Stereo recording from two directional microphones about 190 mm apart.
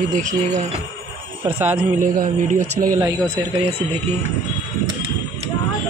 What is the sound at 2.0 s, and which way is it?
Speech, 45° right (ahead or behind).